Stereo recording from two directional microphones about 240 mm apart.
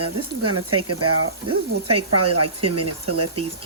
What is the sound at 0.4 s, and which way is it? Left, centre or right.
Speech, right.